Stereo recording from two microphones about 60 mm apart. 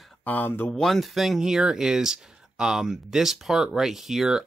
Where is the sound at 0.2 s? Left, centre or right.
Left.